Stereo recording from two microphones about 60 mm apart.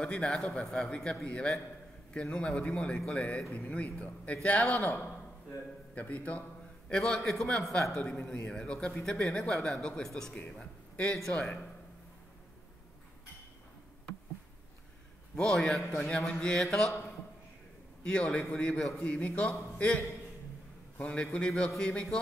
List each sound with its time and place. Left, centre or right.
0.0 s speech: centre
6.9 s a man's voice: centre
15.3 s speech: centre
18.0 s speech: centre
18.8 s speech: centre
19.0 s speech: left